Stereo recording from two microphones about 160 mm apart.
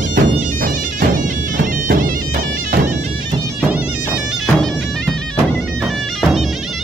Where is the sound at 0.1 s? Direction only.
60° right (ahead or behind).